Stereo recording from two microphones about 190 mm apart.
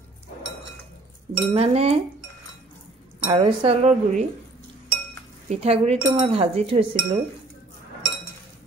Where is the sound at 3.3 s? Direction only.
30° right (ahead or behind).